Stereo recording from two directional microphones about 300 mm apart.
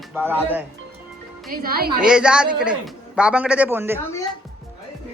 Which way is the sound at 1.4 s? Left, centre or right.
Right.